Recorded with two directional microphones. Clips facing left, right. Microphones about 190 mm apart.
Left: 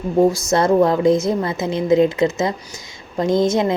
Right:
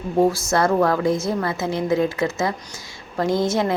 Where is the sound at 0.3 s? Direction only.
20° left (ahead or behind).